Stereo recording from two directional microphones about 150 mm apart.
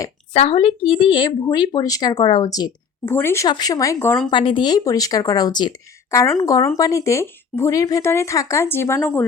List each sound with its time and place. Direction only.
0.3 s speech: 40° left (ahead or behind)
3.1 s speech: 15° left (ahead or behind)
4.3 s speech: 35° left (ahead or behind); by 9.0 s 15° left (ahead or behind)